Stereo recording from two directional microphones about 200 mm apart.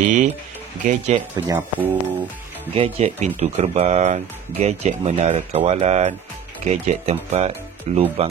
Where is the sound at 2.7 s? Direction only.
30° right (ahead or behind).